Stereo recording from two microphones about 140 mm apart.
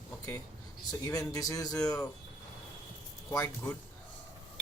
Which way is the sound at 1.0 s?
25° left (ahead or behind).